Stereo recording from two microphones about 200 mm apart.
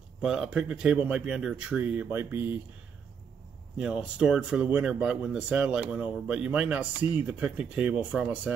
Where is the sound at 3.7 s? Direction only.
5° right (ahead or behind).